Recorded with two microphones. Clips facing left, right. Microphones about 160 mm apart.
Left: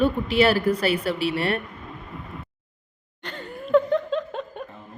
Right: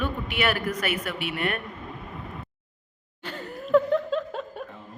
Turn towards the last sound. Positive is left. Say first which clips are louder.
# left 1 dB
turn(degrees=-5)  # may be behind; listen again after turning